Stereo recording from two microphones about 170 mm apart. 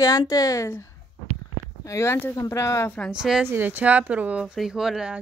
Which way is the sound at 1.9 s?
15° left (ahead or behind).